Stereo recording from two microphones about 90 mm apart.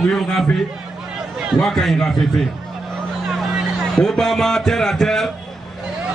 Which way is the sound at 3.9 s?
5° left (ahead or behind).